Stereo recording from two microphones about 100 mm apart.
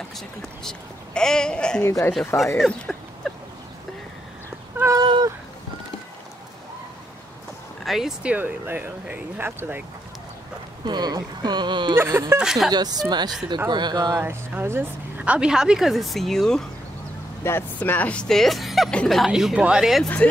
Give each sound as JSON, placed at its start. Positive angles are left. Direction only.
{"t": 0.7, "sound": "speech", "side_deg": 5}
{"t": 1.8, "sound": "speech", "side_deg": 25}
{"t": 2.1, "sound": "speech", "side_deg": 0}
{"t": 2.6, "sound": "a sound", "side_deg": 5}
{"t": 4.9, "sound": "cat", "side_deg": -45}
{"t": 7.8, "sound": "speech", "side_deg": -5}
{"t": 10.9, "sound": "speech", "side_deg": -45}
{"t": 11.9, "sound": "speech", "side_deg": -30}
{"t": 12.4, "sound": "speech", "side_deg": -5}
{"t": 12.7, "sound": "speech", "side_deg": -45}
{"t": 14.2, "sound": "speech", "side_deg": -20}
{"t": 17.4, "sound": "speech", "side_deg": 25}